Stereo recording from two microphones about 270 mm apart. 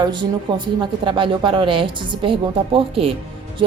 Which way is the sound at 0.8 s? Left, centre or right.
Centre.